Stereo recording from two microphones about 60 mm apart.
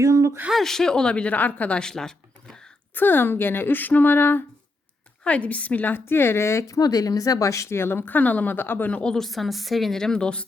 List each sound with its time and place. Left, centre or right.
0.0 s a sound: right
0.5 s a woman's voice: centre; by 1.8 s left
1.8 s a sound: centre
2.9 s a woman's voice: left
5.2 s a woman's voice: left
6.7 s speech: left
7.8 s a woman's voice: left
8.9 s a woman's voice: centre
9.1 s a woman's voice: centre